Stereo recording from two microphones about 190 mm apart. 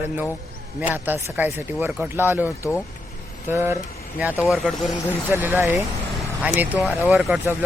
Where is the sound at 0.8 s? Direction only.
10° right (ahead or behind).